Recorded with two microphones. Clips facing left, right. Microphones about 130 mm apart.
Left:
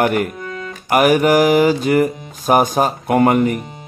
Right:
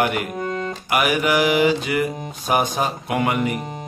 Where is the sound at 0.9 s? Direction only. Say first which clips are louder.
Left 7 dB; 45° left (ahead or behind).